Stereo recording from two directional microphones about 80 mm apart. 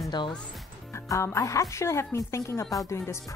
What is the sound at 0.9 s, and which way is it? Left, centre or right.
Speech, left.